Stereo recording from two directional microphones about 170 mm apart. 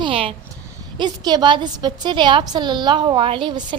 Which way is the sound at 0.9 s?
25° right (ahead or behind).